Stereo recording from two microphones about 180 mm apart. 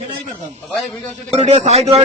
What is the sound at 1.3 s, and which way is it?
Speech, 40° right (ahead or behind).